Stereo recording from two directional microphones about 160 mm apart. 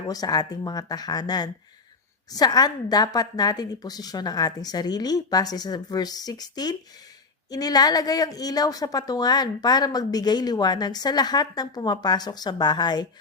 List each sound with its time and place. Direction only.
0.1 s a woman's voice: 25° left (ahead or behind)